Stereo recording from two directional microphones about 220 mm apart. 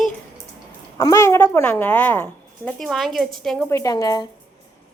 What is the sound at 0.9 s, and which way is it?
A woman's voice, 15° left (ahead or behind).